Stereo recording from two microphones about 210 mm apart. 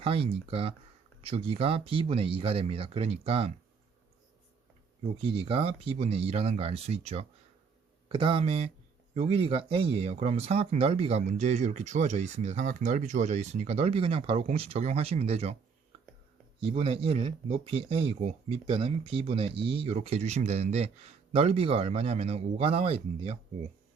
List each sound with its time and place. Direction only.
0.0 s speech: 25° right (ahead or behind)
5.1 s speech: 25° right (ahead or behind)
16.6 s speech: 30° right (ahead or behind)